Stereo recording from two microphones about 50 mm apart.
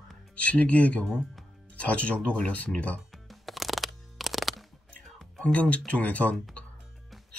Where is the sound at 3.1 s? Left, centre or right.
Centre.